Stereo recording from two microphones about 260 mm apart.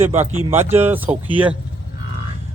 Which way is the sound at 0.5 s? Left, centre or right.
Centre.